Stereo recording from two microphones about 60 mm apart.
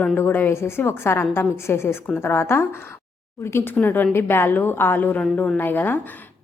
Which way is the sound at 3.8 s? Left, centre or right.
Left.